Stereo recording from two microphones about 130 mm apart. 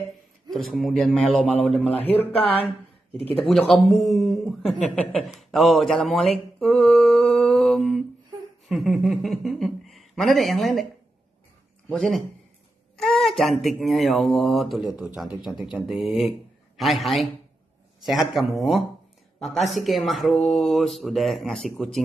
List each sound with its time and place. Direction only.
0.5 s a man's voice: centre (ahead or behind)
2.1 s speech: 45° left (ahead or behind)
3.3 s speech: centre (ahead or behind)
6.6 s mantra: centre (ahead or behind)
8.6 s speech: centre (ahead or behind)
11.9 s speech: centre (ahead or behind)